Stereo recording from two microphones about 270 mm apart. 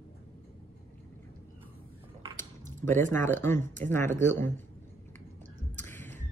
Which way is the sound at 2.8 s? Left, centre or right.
Centre.